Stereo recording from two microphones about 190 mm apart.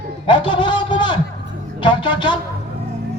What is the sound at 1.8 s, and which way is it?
Speech, 25° left (ahead or behind).